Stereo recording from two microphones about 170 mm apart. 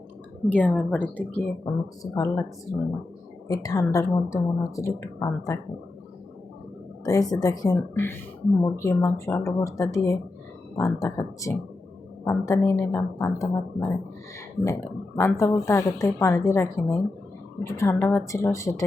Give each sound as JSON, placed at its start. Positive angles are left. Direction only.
{"t": 0.5, "sound": "speech", "side_deg": 10}
{"t": 1.7, "sound": "a woman's voice", "side_deg": 25}
{"t": 2.0, "sound": "speech", "side_deg": 15}
{"t": 3.5, "sound": "a woman's voice", "side_deg": 20}
{"t": 7.0, "sound": "a woman's voice", "side_deg": 20}